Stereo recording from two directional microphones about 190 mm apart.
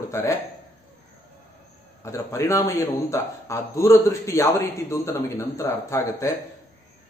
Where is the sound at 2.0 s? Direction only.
15° left (ahead or behind).